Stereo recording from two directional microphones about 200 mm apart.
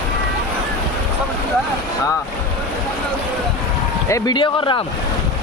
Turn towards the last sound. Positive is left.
turn(degrees=25)  # may be behind; listen again after turning